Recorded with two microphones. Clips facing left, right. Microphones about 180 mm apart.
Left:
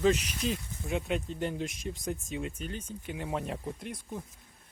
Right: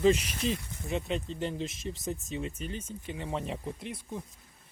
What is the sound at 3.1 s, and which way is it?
Speech, 5° left (ahead or behind).